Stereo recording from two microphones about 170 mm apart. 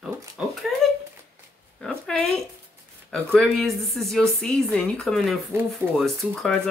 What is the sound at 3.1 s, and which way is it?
Speech, centre (ahead or behind).